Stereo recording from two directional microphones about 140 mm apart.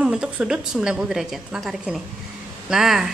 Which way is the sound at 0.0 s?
5° right (ahead or behind).